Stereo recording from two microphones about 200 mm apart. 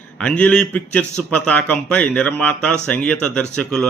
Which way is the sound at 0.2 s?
5° left (ahead or behind).